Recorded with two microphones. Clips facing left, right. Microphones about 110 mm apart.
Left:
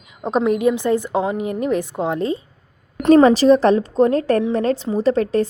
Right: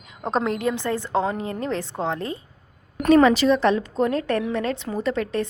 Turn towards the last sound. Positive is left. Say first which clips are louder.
# left 7 dB
turn(degrees=35)  # may be behind; listen again after turning